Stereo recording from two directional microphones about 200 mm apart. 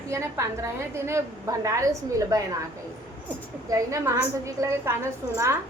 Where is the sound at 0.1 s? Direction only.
15° right (ahead or behind).